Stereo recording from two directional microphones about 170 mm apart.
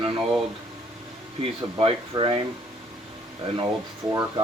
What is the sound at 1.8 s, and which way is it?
Speech, 30° right (ahead or behind).